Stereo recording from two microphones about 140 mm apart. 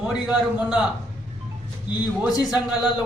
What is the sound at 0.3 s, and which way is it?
Speech, 5° right (ahead or behind).